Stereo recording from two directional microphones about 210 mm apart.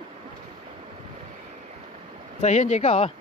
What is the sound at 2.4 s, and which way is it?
Speech, 35° left (ahead or behind).